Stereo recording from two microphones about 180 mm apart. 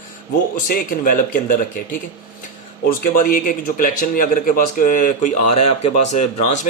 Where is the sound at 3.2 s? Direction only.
50° left (ahead or behind).